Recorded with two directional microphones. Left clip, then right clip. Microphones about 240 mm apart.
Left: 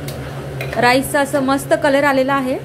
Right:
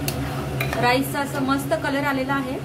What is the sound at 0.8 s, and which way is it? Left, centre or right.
A woman's voice, left.